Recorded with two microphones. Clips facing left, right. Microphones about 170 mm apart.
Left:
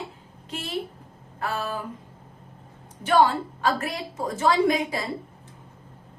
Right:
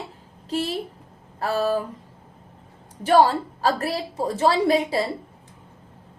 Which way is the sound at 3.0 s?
35° right (ahead or behind).